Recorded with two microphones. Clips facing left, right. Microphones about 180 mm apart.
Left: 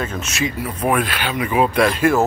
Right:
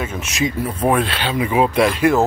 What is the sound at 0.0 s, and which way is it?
Speech, 10° right (ahead or behind).